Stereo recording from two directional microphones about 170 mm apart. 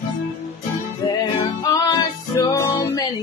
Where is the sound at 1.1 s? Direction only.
25° left (ahead or behind).